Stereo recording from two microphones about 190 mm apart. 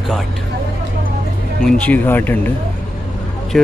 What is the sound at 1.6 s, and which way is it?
Speech, 5° left (ahead or behind).